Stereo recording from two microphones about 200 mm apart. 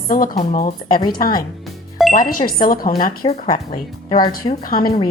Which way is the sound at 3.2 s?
30° left (ahead or behind).